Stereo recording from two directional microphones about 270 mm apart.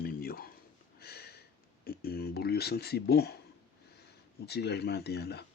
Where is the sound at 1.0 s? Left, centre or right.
Left.